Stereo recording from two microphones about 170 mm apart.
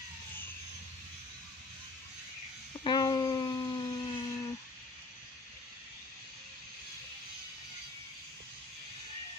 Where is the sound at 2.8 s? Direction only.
25° left (ahead or behind).